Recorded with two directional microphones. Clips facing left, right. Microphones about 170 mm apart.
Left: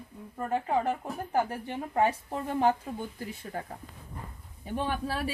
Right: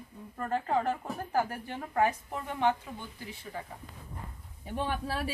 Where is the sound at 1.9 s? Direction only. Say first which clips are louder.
Left 1 dB; 30° left (ahead or behind).